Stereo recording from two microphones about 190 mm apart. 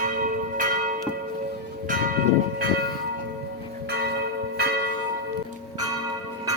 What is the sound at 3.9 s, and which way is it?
Church bell, 60° right (ahead or behind).